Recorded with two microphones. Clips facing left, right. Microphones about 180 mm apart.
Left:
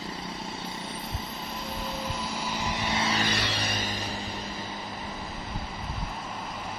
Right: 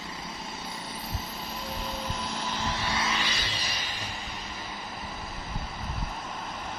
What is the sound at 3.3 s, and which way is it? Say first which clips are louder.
Music: left 5 dB; 65° left (ahead or behind).